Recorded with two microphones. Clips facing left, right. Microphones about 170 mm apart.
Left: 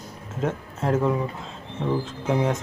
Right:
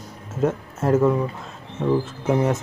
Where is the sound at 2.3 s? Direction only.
5° right (ahead or behind).